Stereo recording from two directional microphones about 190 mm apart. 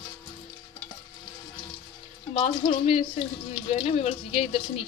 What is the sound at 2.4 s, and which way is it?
Speech, 35° left (ahead or behind).